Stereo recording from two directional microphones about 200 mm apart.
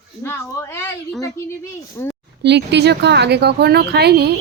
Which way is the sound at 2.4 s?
60° right (ahead or behind).